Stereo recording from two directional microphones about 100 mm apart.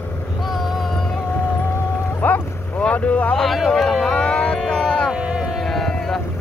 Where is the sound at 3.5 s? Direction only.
Centre (ahead or behind).